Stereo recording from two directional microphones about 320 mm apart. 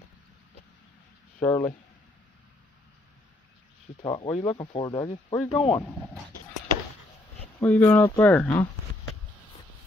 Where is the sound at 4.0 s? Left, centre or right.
Centre.